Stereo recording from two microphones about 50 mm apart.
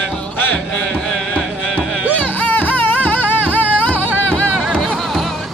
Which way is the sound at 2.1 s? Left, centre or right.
Left.